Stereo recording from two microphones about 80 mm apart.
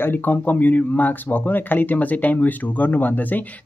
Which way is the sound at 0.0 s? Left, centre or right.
Left.